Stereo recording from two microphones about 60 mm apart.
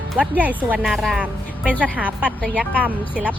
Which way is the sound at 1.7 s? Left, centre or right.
Right.